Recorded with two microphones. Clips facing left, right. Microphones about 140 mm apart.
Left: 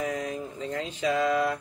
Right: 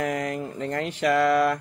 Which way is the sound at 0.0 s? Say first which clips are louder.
Right 4 dB; 75° right (ahead or behind).